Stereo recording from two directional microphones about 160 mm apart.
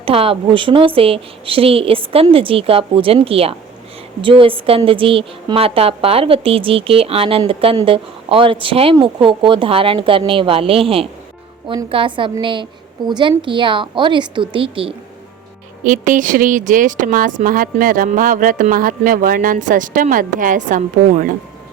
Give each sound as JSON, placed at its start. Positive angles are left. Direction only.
{"t": 0.0, "sound": "a woman's voice", "side_deg": -35}
{"t": 15.8, "sound": "speech", "side_deg": -55}